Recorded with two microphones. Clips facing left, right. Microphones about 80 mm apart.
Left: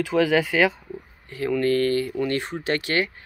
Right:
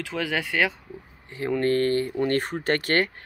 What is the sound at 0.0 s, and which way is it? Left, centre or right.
Speech, centre.